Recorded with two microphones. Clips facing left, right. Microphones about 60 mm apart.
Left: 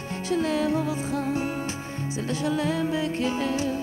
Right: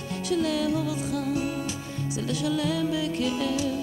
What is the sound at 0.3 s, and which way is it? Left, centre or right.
Music, left.